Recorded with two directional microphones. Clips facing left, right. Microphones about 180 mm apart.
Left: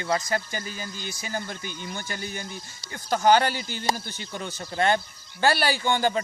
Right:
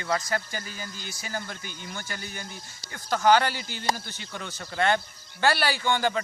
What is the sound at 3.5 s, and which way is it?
Speech, 50° left (ahead or behind).